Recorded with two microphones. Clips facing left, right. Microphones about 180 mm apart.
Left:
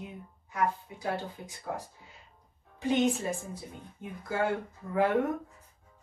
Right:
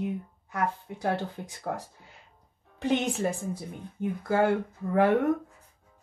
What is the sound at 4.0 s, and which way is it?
Speech, 70° right (ahead or behind).